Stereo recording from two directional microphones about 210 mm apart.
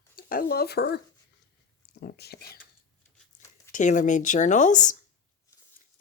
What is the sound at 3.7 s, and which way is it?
Speech, 35° left (ahead or behind).